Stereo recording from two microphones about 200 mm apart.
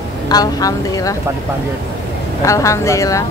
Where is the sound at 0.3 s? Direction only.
20° left (ahead or behind).